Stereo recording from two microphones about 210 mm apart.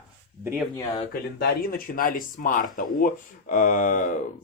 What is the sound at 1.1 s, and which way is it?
Speech, 45° left (ahead or behind).